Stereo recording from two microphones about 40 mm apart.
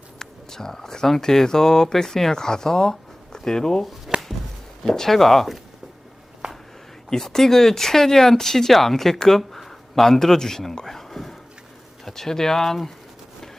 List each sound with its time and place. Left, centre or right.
0.2 s speech: centre
4.1 s chopping: centre
4.8 s speech: centre
6.4 s a sound: right
7.1 s speech: centre